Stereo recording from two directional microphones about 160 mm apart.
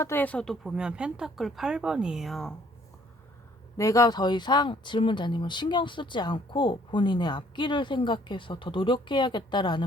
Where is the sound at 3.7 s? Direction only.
20° left (ahead or behind).